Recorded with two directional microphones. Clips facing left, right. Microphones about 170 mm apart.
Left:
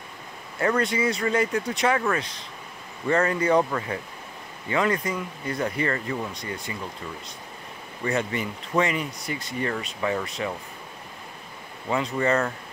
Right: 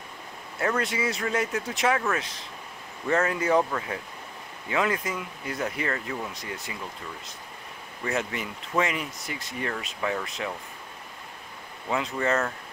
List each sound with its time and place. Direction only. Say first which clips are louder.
0.6 s speech: left 4 dB; centre (ahead or behind)
8.0 s speech: left 3 dB; centre (ahead or behind)
11.9 s speech: left 3 dB; centre (ahead or behind)